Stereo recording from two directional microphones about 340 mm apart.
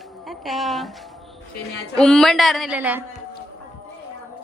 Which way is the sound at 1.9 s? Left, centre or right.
Centre.